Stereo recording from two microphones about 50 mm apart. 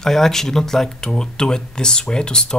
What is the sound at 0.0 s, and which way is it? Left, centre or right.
Speech, centre.